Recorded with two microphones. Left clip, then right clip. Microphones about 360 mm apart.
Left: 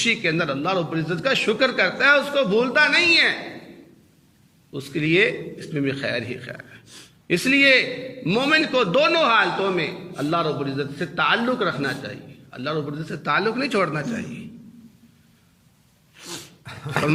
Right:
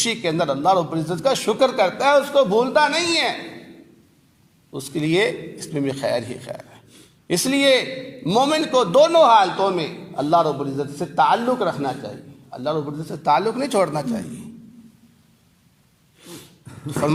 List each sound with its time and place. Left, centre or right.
0.0 s a man's voice: centre
4.7 s a man's voice: centre
16.2 s dog: left